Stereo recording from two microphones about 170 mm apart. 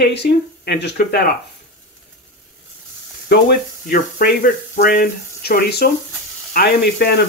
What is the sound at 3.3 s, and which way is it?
Speech, 60° left (ahead or behind).